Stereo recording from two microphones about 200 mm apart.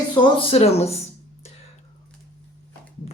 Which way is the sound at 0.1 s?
25° left (ahead or behind).